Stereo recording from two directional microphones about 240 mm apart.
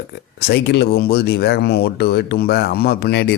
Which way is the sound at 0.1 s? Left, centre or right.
Left.